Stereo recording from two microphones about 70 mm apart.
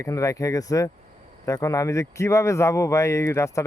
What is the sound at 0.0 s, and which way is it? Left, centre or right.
Speech, left.